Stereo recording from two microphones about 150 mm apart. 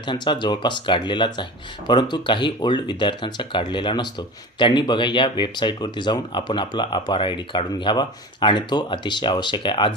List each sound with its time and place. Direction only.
0.0 s speech: 30° left (ahead or behind)